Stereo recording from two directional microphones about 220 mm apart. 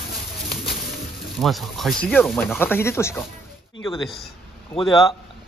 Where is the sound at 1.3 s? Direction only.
Centre (ahead or behind).